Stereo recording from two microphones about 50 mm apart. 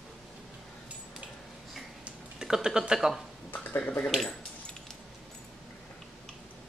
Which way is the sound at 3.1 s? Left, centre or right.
Centre.